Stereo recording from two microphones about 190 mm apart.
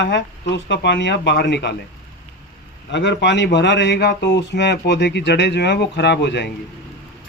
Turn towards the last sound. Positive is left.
turn(degrees=65)  # may be behind; listen again after turning